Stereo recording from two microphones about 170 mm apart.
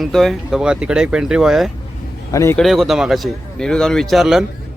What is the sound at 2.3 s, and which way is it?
Speech, 20° left (ahead or behind).